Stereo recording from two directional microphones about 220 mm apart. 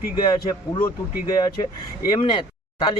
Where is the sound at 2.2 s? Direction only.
25° left (ahead or behind).